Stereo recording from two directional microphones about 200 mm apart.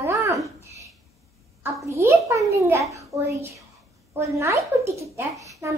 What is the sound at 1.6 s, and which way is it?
A child's voice, 15° right (ahead or behind).